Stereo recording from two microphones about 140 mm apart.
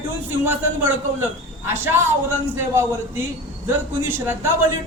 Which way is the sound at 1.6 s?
15° right (ahead or behind).